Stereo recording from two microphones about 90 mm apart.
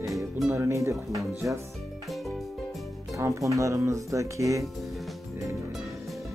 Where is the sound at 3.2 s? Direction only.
35° right (ahead or behind).